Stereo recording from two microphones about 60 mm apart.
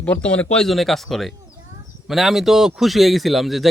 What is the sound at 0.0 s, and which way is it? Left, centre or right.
Speech, left.